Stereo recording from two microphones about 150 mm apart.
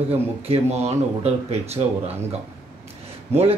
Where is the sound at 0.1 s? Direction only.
45° right (ahead or behind).